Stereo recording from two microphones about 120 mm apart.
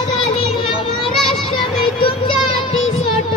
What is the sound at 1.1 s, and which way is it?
Children playing, centre (ahead or behind).